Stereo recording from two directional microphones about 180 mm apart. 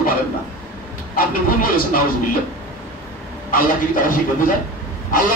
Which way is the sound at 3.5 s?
50° left (ahead or behind).